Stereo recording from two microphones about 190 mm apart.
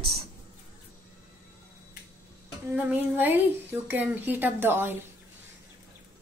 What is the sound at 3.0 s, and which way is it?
A woman's voice, 10° right (ahead or behind).